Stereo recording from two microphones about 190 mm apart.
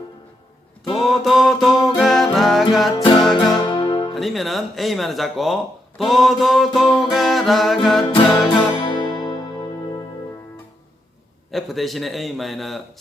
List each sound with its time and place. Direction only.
0.9 s music: centre (ahead or behind)
2.9 s music: 20° left (ahead or behind)
4.1 s music: centre (ahead or behind)
8.4 s music: 25° left (ahead or behind)
11.5 s music: centre (ahead or behind)